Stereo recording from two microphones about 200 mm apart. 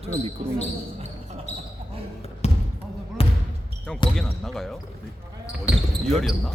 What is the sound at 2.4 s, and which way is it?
Basketball bounce, 30° left (ahead or behind).